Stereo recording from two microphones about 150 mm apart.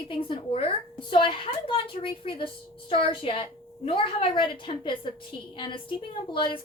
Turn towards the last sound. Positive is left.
turn(degrees=35)  # may be behind; listen again after turning